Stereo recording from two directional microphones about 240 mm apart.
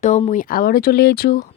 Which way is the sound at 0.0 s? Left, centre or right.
Left.